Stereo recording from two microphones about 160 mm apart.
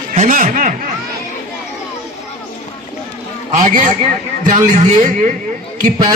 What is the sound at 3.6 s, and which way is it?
Speech, 55° right (ahead or behind).